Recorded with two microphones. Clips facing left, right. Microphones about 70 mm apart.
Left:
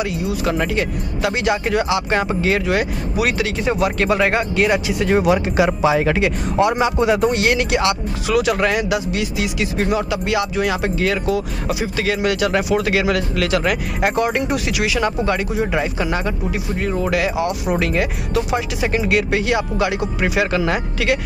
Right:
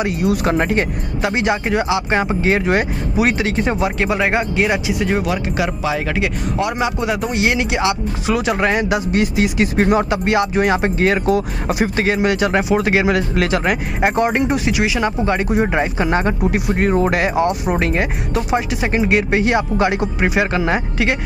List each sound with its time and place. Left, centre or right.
0.2 s speech: right
0.5 s speech: right
1.2 s speech: right
4.0 s speech: centre
5.2 s speech: centre
7.3 s speech: centre; by 12.1 s right
12.1 s speech: right
15.5 s speech: right